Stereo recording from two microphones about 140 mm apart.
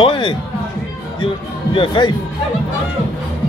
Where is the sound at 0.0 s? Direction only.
35° left (ahead or behind).